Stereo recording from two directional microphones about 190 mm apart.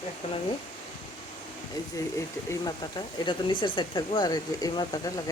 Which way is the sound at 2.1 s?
20° left (ahead or behind).